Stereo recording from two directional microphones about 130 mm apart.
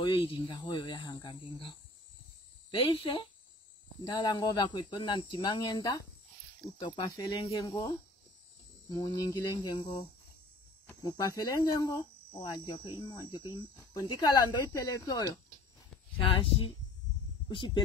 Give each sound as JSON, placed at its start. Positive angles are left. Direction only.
{"t": 0.0, "sound": "speech", "side_deg": 40}
{"t": 2.7, "sound": "speech", "side_deg": 45}
{"t": 6.8, "sound": "speech", "side_deg": 40}
{"t": 7.6, "sound": "speech", "side_deg": 25}
{"t": 12.4, "sound": "speech", "side_deg": 40}
{"t": 16.2, "sound": "speech", "side_deg": 45}